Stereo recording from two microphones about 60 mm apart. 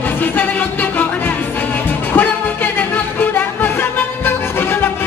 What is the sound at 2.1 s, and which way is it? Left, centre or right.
Music, left.